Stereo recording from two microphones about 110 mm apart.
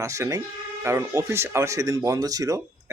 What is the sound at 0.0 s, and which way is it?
Speech, 30° right (ahead or behind).